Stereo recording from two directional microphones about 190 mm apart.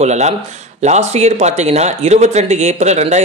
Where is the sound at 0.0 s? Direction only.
35° right (ahead or behind).